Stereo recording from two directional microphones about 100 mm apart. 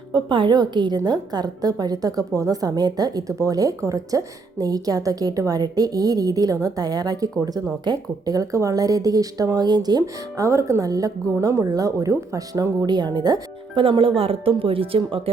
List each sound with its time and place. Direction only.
0.1 s a woman's voice: 55° right (ahead or behind); by 12.7 s 35° right (ahead or behind)
12.8 s a woman's voice: 45° right (ahead or behind)
13.7 s speech: 60° right (ahead or behind)